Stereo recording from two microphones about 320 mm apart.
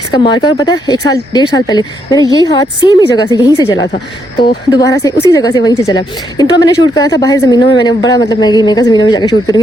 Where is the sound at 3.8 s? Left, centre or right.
Left.